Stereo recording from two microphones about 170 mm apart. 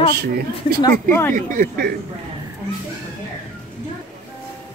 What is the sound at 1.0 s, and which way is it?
Speech, 10° left (ahead or behind).